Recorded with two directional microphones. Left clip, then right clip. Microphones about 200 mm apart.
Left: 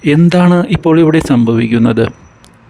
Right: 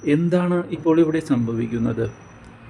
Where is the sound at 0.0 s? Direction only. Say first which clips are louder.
Left 9 dB; 45° left (ahead or behind).